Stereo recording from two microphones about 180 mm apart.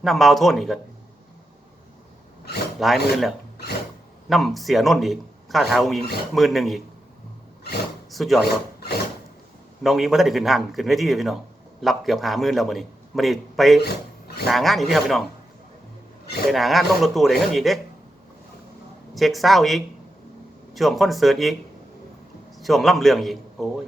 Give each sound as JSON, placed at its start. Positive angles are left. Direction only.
{"t": 0.0, "sound": "a man's voice", "side_deg": 0}
{"t": 2.7, "sound": "a man's voice", "side_deg": 0}
{"t": 8.1, "sound": "a man's voice", "side_deg": 0}
{"t": 9.8, "sound": "a man's voice", "side_deg": 0}
{"t": 13.8, "sound": "a sound", "side_deg": 60}
{"t": 14.4, "sound": "a man's voice", "side_deg": 0}
{"t": 16.5, "sound": "a man's voice", "side_deg": 0}
{"t": 19.1, "sound": "a man's voice", "side_deg": 0}
{"t": 22.5, "sound": "a man's voice", "side_deg": 0}